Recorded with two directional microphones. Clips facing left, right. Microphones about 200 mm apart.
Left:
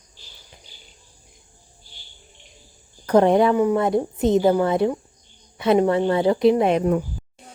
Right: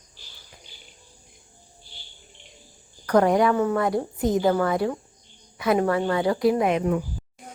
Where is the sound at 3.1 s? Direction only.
25° left (ahead or behind).